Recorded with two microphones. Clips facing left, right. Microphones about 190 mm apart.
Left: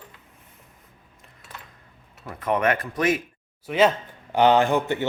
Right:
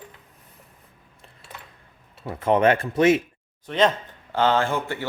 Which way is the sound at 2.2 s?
30° right (ahead or behind).